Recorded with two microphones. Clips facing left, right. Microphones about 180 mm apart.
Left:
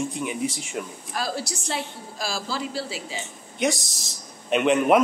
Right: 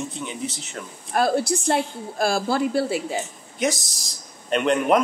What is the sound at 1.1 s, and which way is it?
A woman's voice, 55° right (ahead or behind).